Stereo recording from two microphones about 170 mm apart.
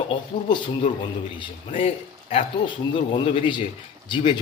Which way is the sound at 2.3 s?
30° left (ahead or behind).